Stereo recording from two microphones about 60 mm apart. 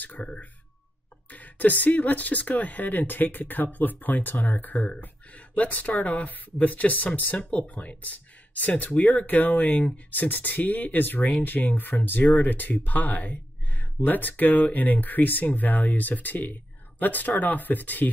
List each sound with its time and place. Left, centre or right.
0.0 s speech: left
1.3 s speech: left